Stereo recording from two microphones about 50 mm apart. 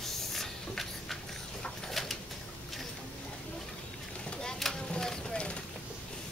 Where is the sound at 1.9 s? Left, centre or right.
Centre.